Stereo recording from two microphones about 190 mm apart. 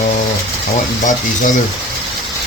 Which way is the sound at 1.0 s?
40° left (ahead or behind).